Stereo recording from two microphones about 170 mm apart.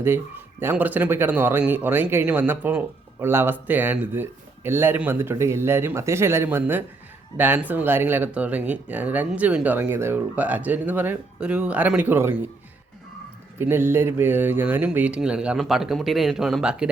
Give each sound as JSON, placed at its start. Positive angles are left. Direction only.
{"t": 0.6, "sound": "speech", "side_deg": -10}
{"t": 13.6, "sound": "speech", "side_deg": -15}